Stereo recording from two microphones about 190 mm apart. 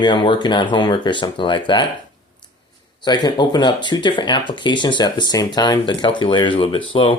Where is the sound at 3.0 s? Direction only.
20° left (ahead or behind).